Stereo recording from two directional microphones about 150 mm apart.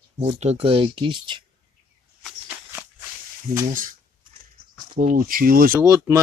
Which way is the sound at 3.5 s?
65° right (ahead or behind).